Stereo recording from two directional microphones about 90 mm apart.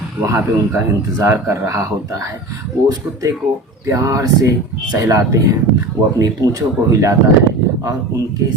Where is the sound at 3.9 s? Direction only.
35° right (ahead or behind).